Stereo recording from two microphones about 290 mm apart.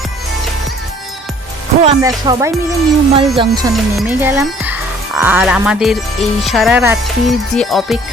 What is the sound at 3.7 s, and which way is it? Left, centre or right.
Speech, centre.